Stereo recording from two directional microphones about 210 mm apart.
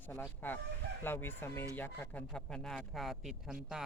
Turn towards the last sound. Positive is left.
turn(degrees=0)  # may be behind; listen again after turning